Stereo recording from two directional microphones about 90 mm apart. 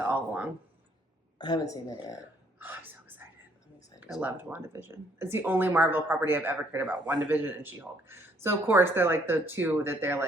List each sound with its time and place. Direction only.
0.0 s a sound: 15° right (ahead or behind)
1.4 s speech: 50° left (ahead or behind)
2.6 s whispering: 20° right (ahead or behind)
4.2 s speech: 20° right (ahead or behind)